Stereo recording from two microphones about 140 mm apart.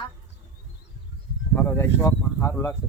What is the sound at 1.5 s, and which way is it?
Speech, 15° left (ahead or behind).